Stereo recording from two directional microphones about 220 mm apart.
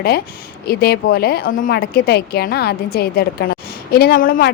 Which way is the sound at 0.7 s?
45° left (ahead or behind).